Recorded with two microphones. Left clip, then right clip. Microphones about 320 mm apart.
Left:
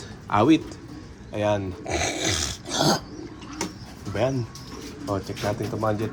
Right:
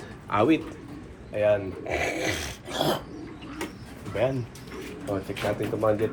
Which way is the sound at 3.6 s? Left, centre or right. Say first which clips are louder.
Left 4 dB; centre.